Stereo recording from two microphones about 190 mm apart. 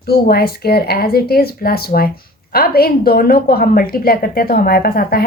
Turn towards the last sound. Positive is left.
turn(degrees=50)  # may be behind; listen again after turning